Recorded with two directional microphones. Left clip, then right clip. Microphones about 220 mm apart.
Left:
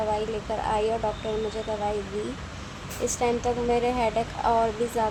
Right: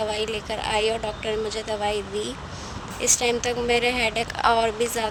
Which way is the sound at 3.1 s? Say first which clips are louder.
Right 3 dB; 40° right (ahead or behind).